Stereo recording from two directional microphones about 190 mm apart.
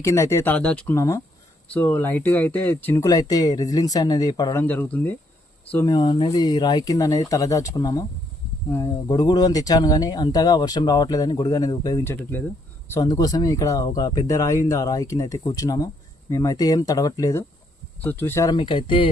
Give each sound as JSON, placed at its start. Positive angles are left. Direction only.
{"t": 0.0, "sound": "speech", "side_deg": 15}
{"t": 4.6, "sound": "speech", "side_deg": 10}